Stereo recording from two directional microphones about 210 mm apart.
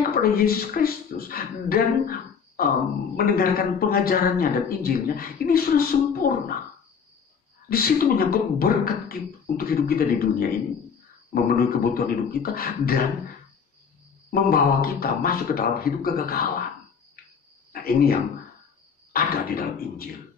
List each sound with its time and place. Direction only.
0.1 s speech: 45° left (ahead or behind)
7.7 s speech: 45° left (ahead or behind)
14.3 s speech: 45° left (ahead or behind)
17.7 s speech: 45° left (ahead or behind)
19.1 s speech: 45° left (ahead or behind)